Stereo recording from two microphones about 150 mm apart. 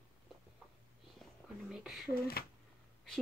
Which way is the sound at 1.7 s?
5° right (ahead or behind).